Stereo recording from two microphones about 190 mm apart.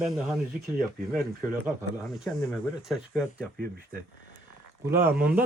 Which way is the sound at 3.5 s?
50° right (ahead or behind).